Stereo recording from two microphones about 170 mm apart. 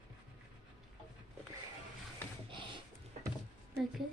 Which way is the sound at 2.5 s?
30° right (ahead or behind).